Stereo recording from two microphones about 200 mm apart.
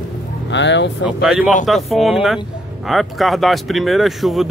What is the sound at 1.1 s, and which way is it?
Speech, 5° right (ahead or behind).